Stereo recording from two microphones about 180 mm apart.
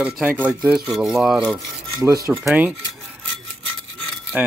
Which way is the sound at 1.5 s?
20° right (ahead or behind).